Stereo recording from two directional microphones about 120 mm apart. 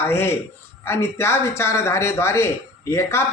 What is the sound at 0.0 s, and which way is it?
Speech, 20° left (ahead or behind).